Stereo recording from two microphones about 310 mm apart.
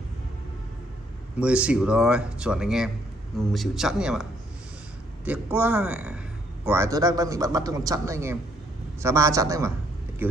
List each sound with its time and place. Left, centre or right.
1.4 s a man's voice: centre